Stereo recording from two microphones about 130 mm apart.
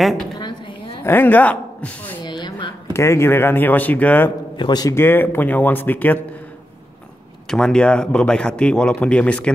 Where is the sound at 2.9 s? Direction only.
20° left (ahead or behind).